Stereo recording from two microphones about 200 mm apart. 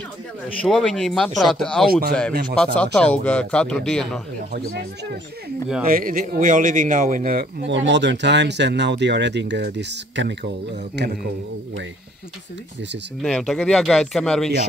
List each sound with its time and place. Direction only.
0.6 s a man's voice: centre (ahead or behind)
1.9 s speech: 50° right (ahead or behind)
2.6 s a man's voice: 5° left (ahead or behind)
4.5 s speech: 50° right (ahead or behind)
5.9 s speech: 45° right (ahead or behind)
7.7 s speech: 65° right (ahead or behind)
13.2 s a man's voice: centre (ahead or behind)